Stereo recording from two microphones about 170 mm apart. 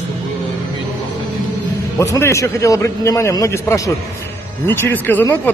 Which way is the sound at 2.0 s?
15° left (ahead or behind).